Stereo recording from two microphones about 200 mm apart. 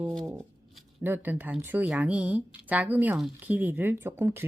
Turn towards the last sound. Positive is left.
turn(degrees=-10)  # may be behind; listen again after turning